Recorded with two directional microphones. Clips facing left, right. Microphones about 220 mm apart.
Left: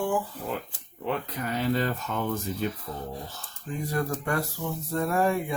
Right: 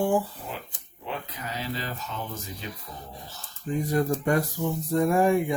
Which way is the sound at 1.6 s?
55° left (ahead or behind).